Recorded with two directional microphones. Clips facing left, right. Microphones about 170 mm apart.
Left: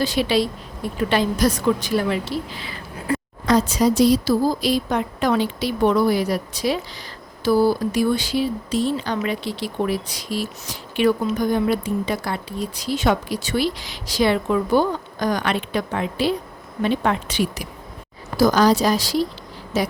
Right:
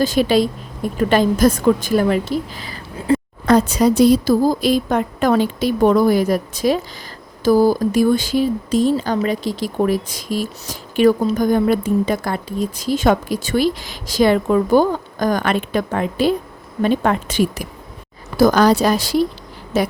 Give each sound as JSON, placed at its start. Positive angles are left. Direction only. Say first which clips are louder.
{"t": 0.0, "sound": "speech", "louder": "right 5 dB", "side_deg": -45}
{"t": 3.1, "sound": "a sound", "louder": "right 7 dB", "side_deg": -30}
{"t": 3.4, "sound": "speech", "louder": "right 3 dB", "side_deg": -60}